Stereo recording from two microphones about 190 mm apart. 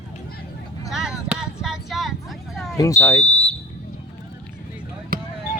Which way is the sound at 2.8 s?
15° left (ahead or behind).